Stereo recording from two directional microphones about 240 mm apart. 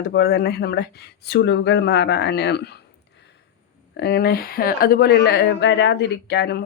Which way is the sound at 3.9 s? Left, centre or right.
Left.